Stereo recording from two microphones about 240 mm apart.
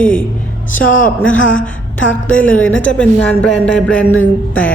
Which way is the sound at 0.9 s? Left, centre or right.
Left.